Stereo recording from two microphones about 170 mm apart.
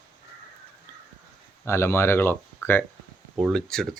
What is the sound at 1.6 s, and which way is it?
Speech, 15° left (ahead or behind).